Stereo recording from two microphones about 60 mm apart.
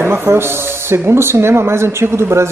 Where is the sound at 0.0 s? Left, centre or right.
Right.